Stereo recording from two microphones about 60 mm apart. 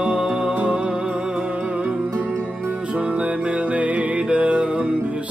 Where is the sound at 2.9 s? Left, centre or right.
Centre.